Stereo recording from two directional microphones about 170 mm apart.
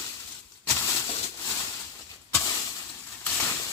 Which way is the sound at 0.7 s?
15° left (ahead or behind).